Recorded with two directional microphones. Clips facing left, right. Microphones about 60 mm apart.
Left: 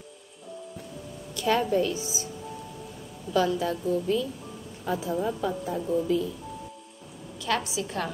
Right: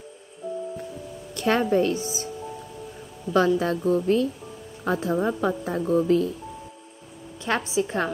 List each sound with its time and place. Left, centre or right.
1.3 s a woman's voice: right
3.3 s a woman's voice: right
4.8 s a woman's voice: right
7.4 s a woman's voice: right